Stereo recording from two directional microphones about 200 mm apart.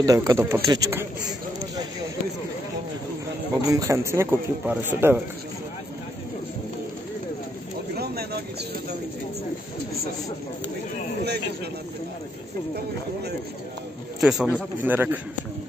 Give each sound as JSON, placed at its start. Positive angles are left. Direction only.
{"t": 0.0, "sound": "a man's voice", "side_deg": -15}
{"t": 3.6, "sound": "a man's voice", "side_deg": -15}
{"t": 7.9, "sound": "a sound", "side_deg": -50}
{"t": 14.2, "sound": "speech", "side_deg": 0}